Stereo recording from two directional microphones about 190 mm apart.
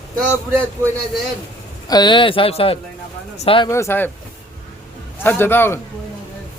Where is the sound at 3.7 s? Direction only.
15° left (ahead or behind).